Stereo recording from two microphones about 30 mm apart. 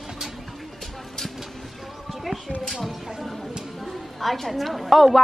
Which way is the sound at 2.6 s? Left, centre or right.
Centre.